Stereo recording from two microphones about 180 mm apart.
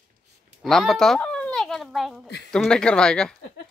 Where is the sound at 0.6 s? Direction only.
Centre (ahead or behind).